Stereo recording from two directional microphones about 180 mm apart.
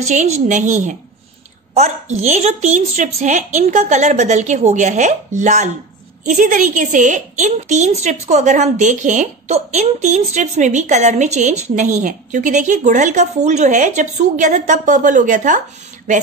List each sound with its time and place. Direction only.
0.0 s a woman's voice: 40° right (ahead or behind)